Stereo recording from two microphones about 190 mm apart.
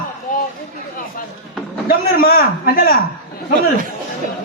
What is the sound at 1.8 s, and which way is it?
A man's voice, 55° left (ahead or behind).